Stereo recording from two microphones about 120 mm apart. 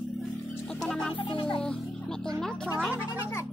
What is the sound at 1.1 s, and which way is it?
Music, 45° left (ahead or behind).